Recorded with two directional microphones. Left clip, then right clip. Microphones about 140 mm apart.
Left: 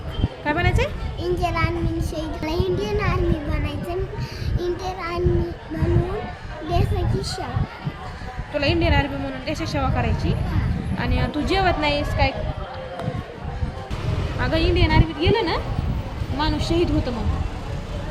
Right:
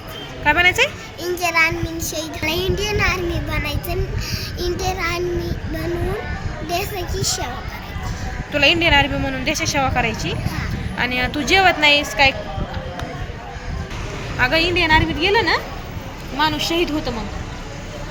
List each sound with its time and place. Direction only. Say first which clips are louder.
0.4 s a woman's voice: right 8 dB; 5° right (ahead or behind)
1.2 s child singing: right 6 dB; 15° left (ahead or behind)
6.7 s child singing: right 1 dB; 15° left (ahead or behind)
8.5 s a woman's voice: right 7 dB; 10° right (ahead or behind)
14.3 s a woman's voice: right 6 dB; 10° right (ahead or behind)